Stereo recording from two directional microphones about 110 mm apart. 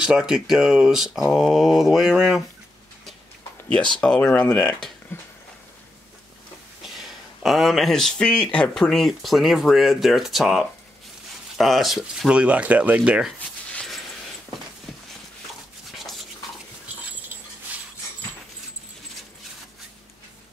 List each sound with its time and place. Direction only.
0.0 s speech: 10° right (ahead or behind)
4.0 s speech: 15° left (ahead or behind)
5.1 s a sound: 20° left (ahead or behind)
7.0 s speech: centre (ahead or behind)
13.7 s a sound: 10° left (ahead or behind)
16.0 s toothbrush: centre (ahead or behind)